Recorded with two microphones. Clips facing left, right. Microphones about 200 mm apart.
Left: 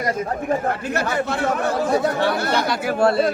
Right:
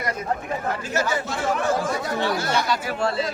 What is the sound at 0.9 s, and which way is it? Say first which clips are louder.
Speech: left 3 dB; 60° left (ahead or behind).